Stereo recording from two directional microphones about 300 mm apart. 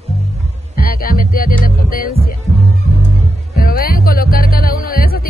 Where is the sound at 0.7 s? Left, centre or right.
Left.